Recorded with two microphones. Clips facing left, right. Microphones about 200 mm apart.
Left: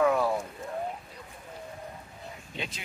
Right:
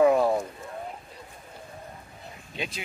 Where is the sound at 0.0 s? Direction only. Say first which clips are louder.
Right 5 dB; 25° right (ahead or behind).